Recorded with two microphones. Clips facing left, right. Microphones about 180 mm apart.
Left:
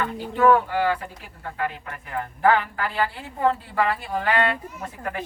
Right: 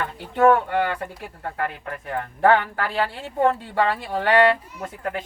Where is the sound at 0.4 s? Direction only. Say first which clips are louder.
Right 1 dB; 60° right (ahead or behind).